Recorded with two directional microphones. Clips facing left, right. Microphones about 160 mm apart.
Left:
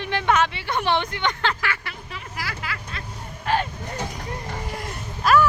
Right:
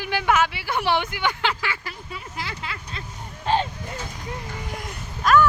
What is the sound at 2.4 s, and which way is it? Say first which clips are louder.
Vehicle: left 2 dB; 25° right (ahead or behind).